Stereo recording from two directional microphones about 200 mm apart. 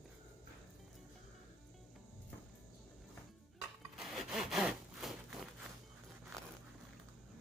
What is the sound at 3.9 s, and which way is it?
Sawing, centre (ahead or behind).